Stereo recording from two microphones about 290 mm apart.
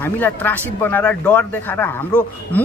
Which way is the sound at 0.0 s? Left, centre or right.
Centre.